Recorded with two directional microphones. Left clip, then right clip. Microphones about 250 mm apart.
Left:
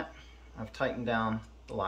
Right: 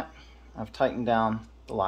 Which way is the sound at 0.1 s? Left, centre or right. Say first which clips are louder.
Right 4 dB; right.